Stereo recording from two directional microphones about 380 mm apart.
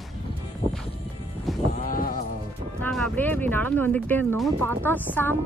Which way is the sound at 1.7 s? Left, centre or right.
Left.